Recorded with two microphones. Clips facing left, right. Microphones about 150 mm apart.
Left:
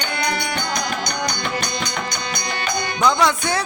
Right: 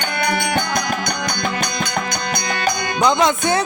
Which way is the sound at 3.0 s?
20° right (ahead or behind).